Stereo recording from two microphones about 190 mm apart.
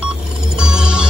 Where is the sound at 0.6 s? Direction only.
5° right (ahead or behind).